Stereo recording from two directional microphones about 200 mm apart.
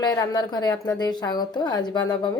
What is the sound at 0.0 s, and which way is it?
A woman's voice, 20° left (ahead or behind).